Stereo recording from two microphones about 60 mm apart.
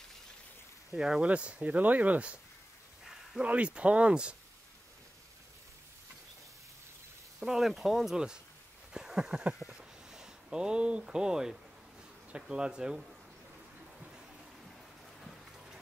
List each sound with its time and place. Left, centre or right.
0.9 s speech: centre
1.2 s speech: right
3.3 s speech: right
7.3 s speech: centre
8.9 s a sound: centre
12.3 s speech: centre